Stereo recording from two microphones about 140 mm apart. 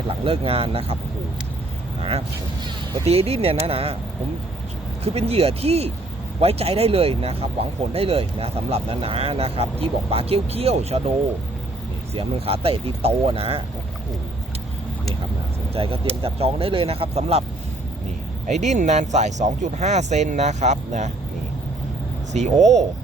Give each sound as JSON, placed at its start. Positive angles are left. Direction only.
{"t": 0.3, "sound": "speech", "side_deg": -40}
{"t": 2.0, "sound": "speech", "side_deg": -45}
{"t": 5.0, "sound": "speech", "side_deg": -45}
{"t": 12.1, "sound": "speech", "side_deg": -45}
{"t": 15.7, "sound": "speech", "side_deg": -40}
{"t": 18.4, "sound": "speech", "side_deg": -55}
{"t": 22.3, "sound": "speech", "side_deg": -60}